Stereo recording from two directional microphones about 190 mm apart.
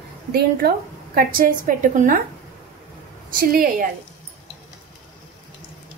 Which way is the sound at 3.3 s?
50° right (ahead or behind).